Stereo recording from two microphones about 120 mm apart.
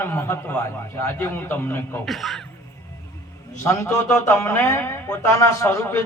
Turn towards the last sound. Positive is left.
turn(degrees=20)  # may be behind; listen again after turning